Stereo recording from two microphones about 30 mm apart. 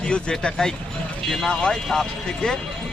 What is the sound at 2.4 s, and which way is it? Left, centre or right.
Speech, left.